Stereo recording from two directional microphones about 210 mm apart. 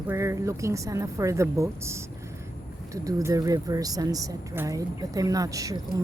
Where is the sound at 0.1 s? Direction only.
15° right (ahead or behind).